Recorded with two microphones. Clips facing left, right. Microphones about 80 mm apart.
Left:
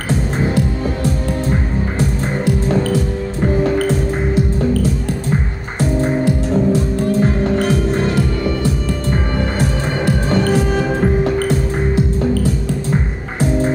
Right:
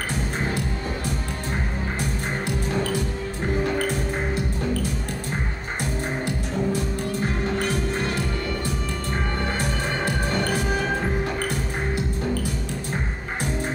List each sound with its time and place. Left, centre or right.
5.8 s music: left
9.6 s music: left